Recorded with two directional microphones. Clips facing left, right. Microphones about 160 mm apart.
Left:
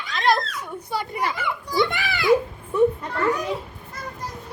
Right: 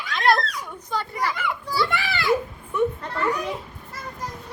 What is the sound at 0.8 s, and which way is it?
A child's voice, 15° left (ahead or behind).